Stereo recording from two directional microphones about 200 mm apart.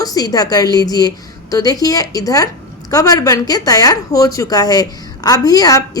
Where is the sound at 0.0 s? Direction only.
20° left (ahead or behind).